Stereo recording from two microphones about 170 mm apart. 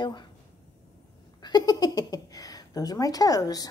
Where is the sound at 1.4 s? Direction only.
25° left (ahead or behind).